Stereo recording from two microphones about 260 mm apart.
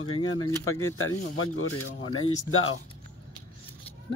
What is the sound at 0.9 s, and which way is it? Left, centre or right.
Speech, left.